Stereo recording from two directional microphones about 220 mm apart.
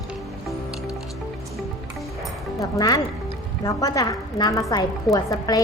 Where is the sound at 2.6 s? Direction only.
15° left (ahead or behind).